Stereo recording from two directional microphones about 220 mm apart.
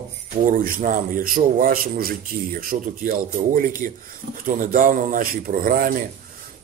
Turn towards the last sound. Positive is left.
turn(degrees=-40)  # may be behind; listen again after turning